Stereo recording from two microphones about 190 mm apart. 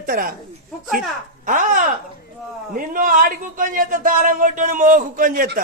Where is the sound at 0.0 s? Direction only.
50° right (ahead or behind).